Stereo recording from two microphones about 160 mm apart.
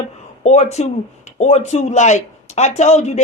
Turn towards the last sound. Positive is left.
turn(degrees=45)  # may be behind; listen again after turning